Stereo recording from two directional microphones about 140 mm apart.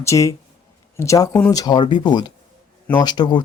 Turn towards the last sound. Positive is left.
turn(degrees=30)  # may be behind; listen again after turning